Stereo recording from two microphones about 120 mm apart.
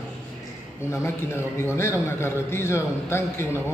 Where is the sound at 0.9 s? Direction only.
20° left (ahead or behind).